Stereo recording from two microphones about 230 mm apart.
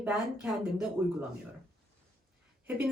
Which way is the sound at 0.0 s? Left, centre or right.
Centre.